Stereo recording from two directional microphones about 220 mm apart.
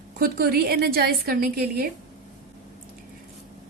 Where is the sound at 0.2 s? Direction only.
45° right (ahead or behind).